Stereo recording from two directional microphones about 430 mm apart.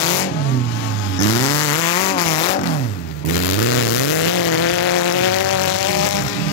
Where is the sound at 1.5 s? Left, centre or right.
Centre.